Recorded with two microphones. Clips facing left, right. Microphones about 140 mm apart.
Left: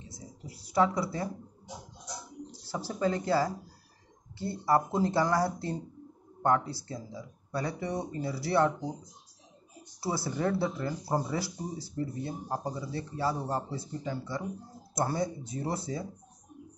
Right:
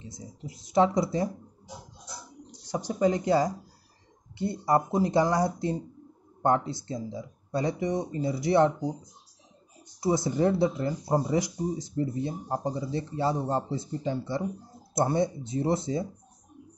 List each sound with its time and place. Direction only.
0.1 s a sound: 20° right (ahead or behind)
2.7 s speech: 15° right (ahead or behind)
9.9 s speech: 20° right (ahead or behind)